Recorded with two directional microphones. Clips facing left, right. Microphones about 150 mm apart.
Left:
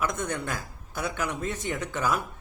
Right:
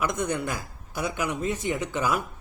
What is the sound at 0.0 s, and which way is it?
A man's voice, 10° right (ahead or behind).